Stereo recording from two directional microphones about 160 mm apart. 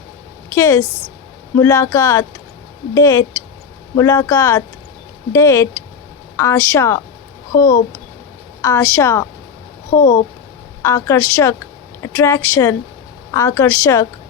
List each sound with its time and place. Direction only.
0.5 s a woman's voice: 15° left (ahead or behind)
8.6 s speech: 20° left (ahead or behind)
10.0 s speech: 55° left (ahead or behind)
10.8 s a woman's voice: 20° left (ahead or behind)